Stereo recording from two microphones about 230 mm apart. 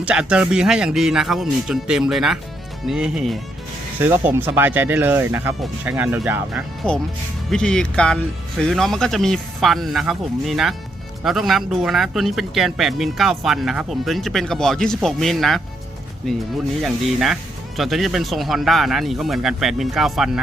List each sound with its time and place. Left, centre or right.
0.0 s speech: centre